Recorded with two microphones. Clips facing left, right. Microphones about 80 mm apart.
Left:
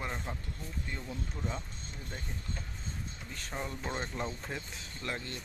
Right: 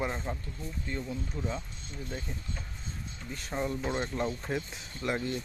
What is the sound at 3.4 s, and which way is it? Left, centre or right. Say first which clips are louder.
Speech: right 7 dB; centre.